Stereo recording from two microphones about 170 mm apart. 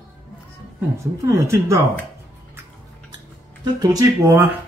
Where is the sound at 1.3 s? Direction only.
15° right (ahead or behind).